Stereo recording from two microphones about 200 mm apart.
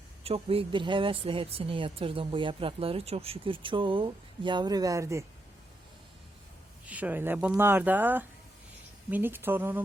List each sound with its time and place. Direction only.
0.3 s speech: 30° right (ahead or behind)
6.8 s speech: 5° right (ahead or behind)